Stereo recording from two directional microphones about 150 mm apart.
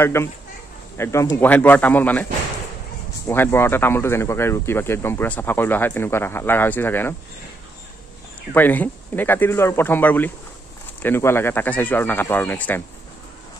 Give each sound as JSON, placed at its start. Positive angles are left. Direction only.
{"t": 0.0, "sound": "speech", "side_deg": 15}
{"t": 3.3, "sound": "speech", "side_deg": 15}
{"t": 8.5, "sound": "speech", "side_deg": 10}